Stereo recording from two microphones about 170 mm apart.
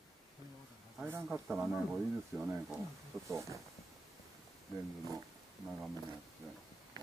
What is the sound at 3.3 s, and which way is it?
Speech, 15° right (ahead or behind).